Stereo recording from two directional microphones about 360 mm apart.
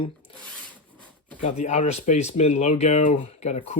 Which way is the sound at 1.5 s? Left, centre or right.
Centre.